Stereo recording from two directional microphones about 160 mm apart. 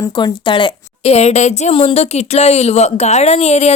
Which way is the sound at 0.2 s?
30° left (ahead or behind).